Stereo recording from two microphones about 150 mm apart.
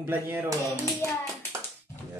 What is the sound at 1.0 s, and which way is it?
Speech, 15° left (ahead or behind).